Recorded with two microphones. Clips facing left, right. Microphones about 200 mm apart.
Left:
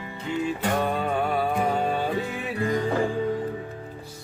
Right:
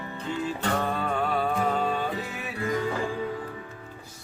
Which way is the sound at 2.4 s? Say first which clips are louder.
Left 1 dB; 35° left (ahead or behind).